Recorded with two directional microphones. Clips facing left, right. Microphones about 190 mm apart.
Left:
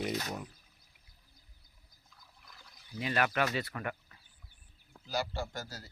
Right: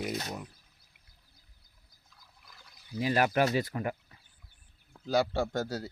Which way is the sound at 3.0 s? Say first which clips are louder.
Right 5 dB; 35° right (ahead or behind).